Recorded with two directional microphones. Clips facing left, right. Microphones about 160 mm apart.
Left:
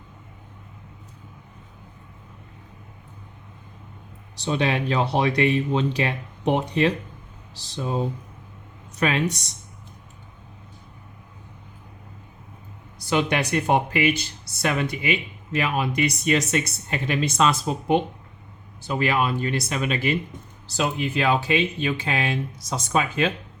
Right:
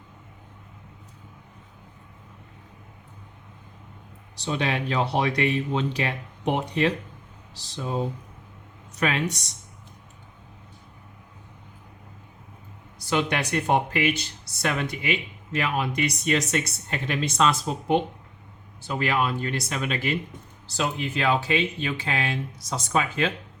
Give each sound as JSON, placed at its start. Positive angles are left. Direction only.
{"t": 4.4, "sound": "speech", "side_deg": 25}
{"t": 13.1, "sound": "speech", "side_deg": 15}